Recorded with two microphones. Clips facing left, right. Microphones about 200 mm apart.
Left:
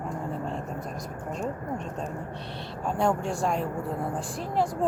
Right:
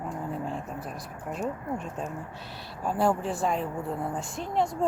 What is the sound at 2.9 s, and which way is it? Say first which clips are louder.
Speech: even; 5° right (ahead or behind).